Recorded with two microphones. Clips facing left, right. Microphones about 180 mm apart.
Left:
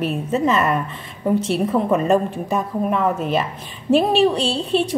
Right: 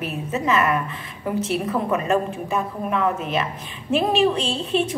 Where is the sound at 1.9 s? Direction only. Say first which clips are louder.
Left 3 dB; 35° left (ahead or behind).